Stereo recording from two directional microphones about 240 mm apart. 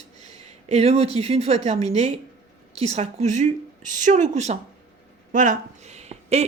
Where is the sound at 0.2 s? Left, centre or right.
Right.